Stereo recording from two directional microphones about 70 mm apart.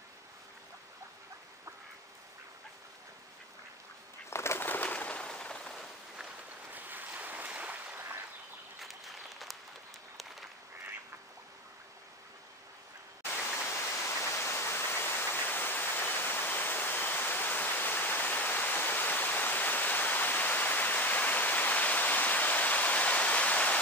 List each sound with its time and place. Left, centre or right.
4.3 s bird: left; by 5.9 s centre
6.7 s boat: right
8.8 s applause: centre
13.2 s waterfall: left